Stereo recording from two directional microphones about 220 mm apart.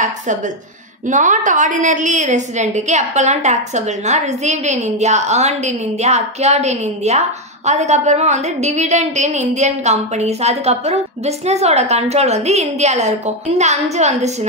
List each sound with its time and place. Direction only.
1.0 s a woman's voice: 35° right (ahead or behind)